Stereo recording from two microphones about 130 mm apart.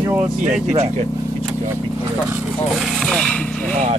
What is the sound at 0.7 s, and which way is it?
Speech, 60° right (ahead or behind).